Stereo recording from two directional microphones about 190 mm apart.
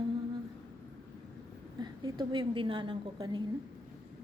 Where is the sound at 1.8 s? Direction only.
25° right (ahead or behind).